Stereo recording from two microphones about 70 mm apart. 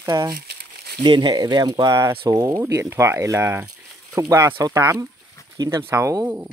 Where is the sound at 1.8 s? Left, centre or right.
Right.